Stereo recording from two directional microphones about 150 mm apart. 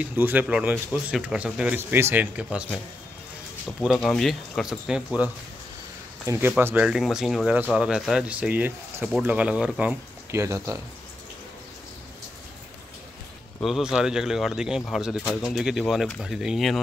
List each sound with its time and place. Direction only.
0.0 s speech: 10° right (ahead or behind)
3.6 s speech: centre (ahead or behind)
6.2 s speech: 20° right (ahead or behind)
13.6 s speech: centre (ahead or behind)